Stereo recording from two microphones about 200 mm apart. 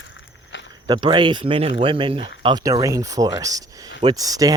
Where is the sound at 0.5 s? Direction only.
65° left (ahead or behind).